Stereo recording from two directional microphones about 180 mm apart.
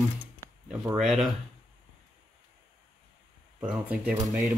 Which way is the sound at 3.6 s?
5° right (ahead or behind).